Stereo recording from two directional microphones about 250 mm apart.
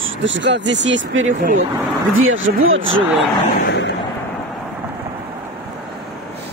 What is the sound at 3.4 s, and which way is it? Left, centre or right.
Vehicle, left.